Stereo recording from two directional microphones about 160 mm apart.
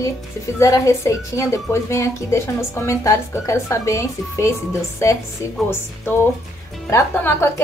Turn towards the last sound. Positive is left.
turn(degrees=15)  # may be behind; listen again after turning